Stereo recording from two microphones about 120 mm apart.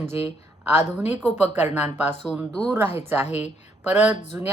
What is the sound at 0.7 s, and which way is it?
A woman's voice, 15° right (ahead or behind).